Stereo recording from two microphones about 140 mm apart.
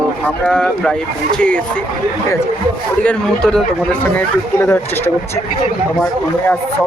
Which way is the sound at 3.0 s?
5° left (ahead or behind).